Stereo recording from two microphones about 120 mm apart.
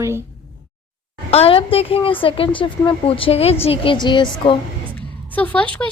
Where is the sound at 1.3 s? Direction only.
55° left (ahead or behind).